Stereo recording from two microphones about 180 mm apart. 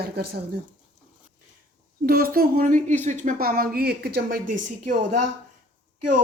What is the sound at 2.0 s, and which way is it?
Speech, 55° right (ahead or behind).